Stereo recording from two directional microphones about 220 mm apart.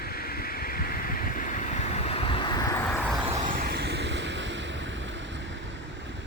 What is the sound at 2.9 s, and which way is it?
Vehicle, 5° left (ahead or behind).